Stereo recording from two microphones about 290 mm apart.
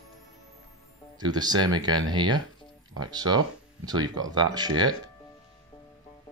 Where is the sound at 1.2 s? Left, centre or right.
Centre.